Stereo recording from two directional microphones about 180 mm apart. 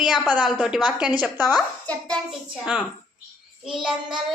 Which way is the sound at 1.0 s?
10° right (ahead or behind).